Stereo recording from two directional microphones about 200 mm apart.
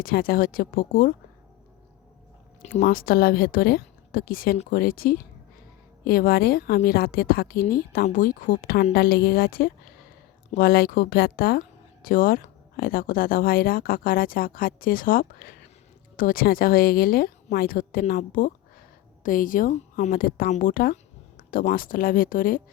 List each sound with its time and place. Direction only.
0.0 s a woman's voice: 50° left (ahead or behind)
2.8 s a woman's voice: 45° left (ahead or behind)